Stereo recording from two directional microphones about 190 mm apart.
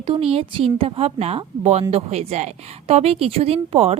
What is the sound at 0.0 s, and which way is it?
A woman's voice, 30° right (ahead or behind).